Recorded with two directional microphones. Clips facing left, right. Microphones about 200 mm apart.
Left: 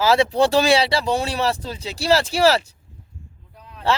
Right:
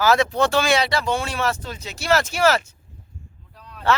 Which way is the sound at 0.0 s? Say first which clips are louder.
Left 2 dB; 30° left (ahead or behind).